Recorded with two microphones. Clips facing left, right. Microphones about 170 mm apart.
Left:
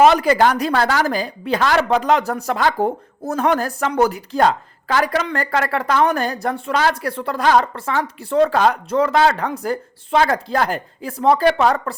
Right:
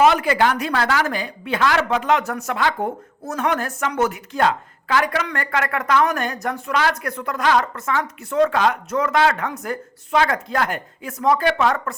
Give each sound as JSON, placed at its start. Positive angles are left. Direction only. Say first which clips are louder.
{"t": 0.0, "sound": "a woman's voice", "louder": "left 3 dB", "side_deg": 35}